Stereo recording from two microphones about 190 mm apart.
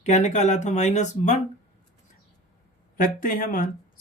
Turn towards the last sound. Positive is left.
turn(degrees=45)  # may be behind; listen again after turning